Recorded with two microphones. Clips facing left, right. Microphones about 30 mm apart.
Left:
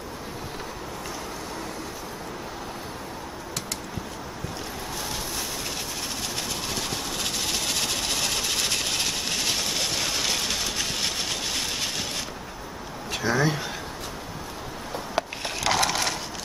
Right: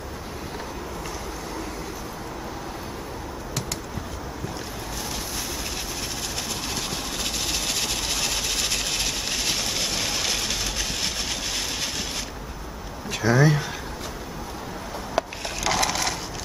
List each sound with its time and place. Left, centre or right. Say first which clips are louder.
7.2 s engine: even; centre
13.1 s speech: right 4 dB; centre
15.1 s crushing: right 2 dB; centre